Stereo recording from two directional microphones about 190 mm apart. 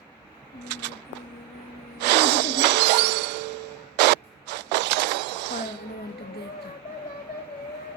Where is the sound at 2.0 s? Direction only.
65° right (ahead or behind).